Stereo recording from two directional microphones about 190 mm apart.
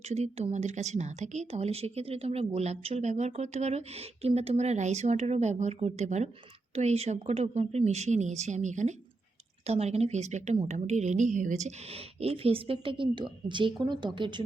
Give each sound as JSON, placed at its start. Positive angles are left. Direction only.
{"t": 0.0, "sound": "speech", "side_deg": -35}